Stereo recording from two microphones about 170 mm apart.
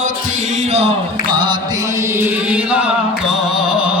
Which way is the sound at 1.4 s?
25° right (ahead or behind).